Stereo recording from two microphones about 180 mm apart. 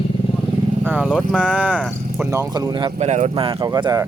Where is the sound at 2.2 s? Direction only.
15° right (ahead or behind).